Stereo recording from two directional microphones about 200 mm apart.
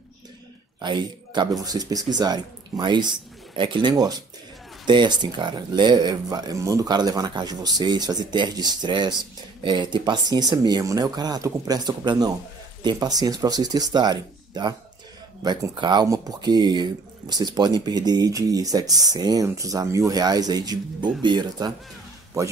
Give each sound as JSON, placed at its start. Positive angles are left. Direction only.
{"t": 0.7, "sound": "speech", "side_deg": -20}